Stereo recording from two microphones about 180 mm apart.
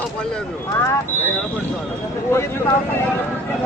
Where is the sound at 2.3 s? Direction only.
15° left (ahead or behind).